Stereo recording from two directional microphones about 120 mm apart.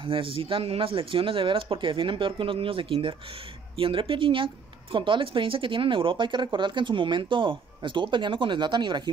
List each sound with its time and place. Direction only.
0.0 s speech: 45° right (ahead or behind)